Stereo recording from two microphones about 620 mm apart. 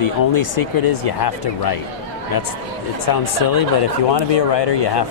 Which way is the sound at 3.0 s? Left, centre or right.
Left.